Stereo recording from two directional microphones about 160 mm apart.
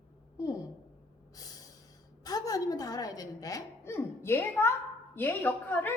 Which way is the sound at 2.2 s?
25° left (ahead or behind).